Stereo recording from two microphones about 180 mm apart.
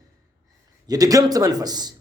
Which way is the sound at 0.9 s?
20° right (ahead or behind).